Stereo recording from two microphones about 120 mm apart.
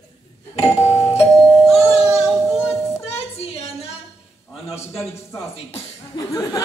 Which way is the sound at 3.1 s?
60° left (ahead or behind).